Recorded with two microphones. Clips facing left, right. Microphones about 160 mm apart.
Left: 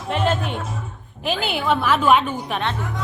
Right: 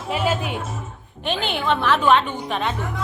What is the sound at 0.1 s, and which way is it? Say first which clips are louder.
Speech: left 1 dB; 5° right (ahead or behind).